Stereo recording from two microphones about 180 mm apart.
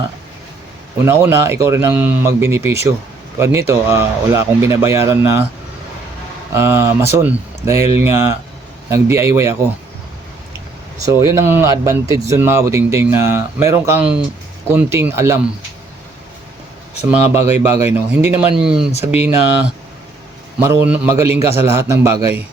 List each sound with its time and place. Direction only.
0.9 s speech: 15° right (ahead or behind)
6.5 s speech: 15° right (ahead or behind)
11.0 s speech: 15° right (ahead or behind)
17.0 s speech: 10° right (ahead or behind)
20.6 s speech: 15° right (ahead or behind)